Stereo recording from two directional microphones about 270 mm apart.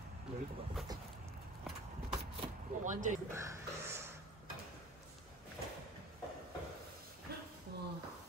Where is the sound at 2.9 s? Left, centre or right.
Right.